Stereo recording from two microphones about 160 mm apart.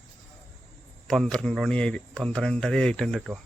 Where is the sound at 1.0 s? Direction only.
Centre (ahead or behind).